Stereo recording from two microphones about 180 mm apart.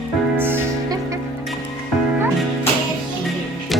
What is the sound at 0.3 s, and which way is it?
Music, 10° right (ahead or behind).